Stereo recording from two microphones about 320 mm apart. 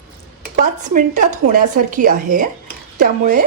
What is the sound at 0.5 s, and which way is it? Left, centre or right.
Speech, right.